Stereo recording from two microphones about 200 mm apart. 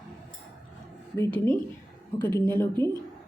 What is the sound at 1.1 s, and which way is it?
Speech, 10° left (ahead or behind).